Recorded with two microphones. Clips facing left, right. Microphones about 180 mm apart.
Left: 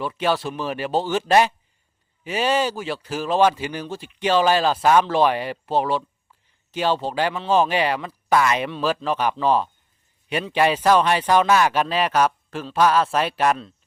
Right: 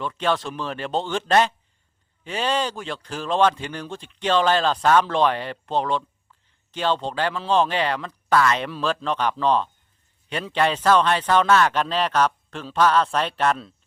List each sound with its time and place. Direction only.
0.0 s speech: 10° left (ahead or behind)